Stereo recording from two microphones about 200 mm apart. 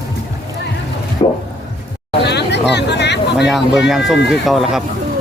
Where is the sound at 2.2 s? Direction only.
60° left (ahead or behind).